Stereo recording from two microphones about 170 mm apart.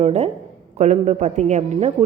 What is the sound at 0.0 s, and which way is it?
A woman's voice, 40° right (ahead or behind).